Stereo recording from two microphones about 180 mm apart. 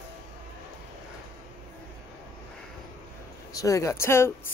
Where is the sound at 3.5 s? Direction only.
20° left (ahead or behind).